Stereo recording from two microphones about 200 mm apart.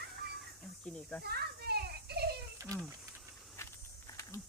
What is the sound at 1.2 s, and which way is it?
Children playing, 55° right (ahead or behind).